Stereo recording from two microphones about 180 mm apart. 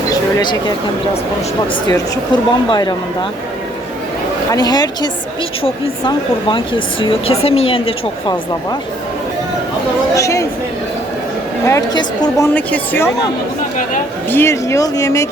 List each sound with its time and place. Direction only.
0.1 s a sound: 20° left (ahead or behind)
1.9 s speech: 25° left (ahead or behind)
4.5 s speech: 20° left (ahead or behind)
10.2 s speech: 15° left (ahead or behind)
11.6 s speech: 20° left (ahead or behind)
14.3 s speech: 15° left (ahead or behind)